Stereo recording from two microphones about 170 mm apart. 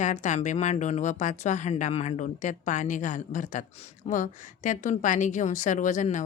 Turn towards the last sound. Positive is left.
turn(degrees=45)  # may be behind; listen again after turning